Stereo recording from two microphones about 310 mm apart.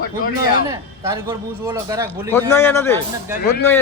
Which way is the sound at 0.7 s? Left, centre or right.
Centre.